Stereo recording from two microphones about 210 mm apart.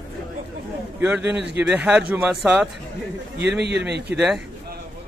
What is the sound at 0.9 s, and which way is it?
A man's voice, 10° right (ahead or behind).